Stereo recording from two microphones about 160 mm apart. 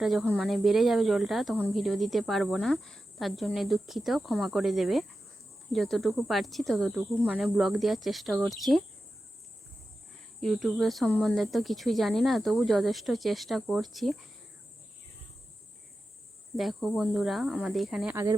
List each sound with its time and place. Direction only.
0.0 s speech: centre (ahead or behind)
10.4 s speech: centre (ahead or behind)
16.6 s speech: centre (ahead or behind)
18.1 s speech: 15° right (ahead or behind)